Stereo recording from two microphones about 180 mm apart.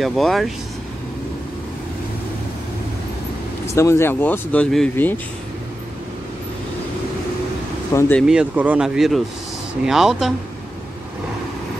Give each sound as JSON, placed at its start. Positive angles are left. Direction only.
{"t": 0.0, "sound": "speech", "side_deg": 0}
{"t": 3.6, "sound": "speech", "side_deg": 15}
{"t": 7.9, "sound": "speech", "side_deg": 15}
{"t": 8.2, "sound": "speech", "side_deg": -5}